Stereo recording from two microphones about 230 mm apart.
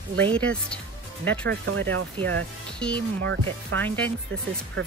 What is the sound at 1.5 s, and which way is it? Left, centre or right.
Speech, right.